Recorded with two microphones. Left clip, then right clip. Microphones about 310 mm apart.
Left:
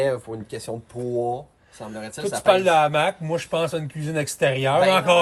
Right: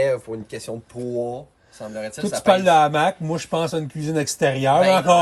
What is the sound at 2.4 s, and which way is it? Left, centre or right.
Speech, centre.